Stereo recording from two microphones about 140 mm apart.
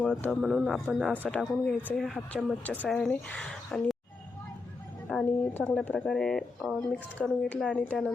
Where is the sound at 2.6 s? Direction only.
10° left (ahead or behind).